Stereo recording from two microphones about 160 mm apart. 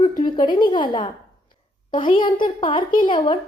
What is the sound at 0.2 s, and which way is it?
A child's voice, 30° left (ahead or behind).